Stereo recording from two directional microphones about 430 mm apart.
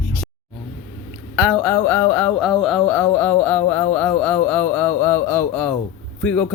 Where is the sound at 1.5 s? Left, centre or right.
Centre.